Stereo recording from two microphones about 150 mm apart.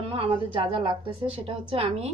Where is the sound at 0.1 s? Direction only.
35° right (ahead or behind).